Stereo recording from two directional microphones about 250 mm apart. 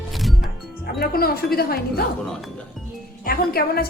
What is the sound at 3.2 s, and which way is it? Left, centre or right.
Speech, left.